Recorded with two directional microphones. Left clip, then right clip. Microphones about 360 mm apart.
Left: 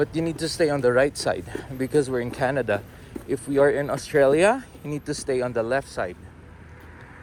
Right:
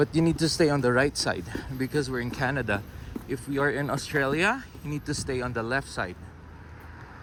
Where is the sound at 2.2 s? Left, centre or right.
Centre.